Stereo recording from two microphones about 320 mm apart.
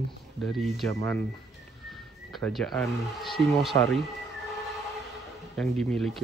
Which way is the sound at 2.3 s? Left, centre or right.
Centre.